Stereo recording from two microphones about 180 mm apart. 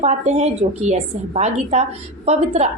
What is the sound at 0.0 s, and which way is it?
Speech, 40° right (ahead or behind).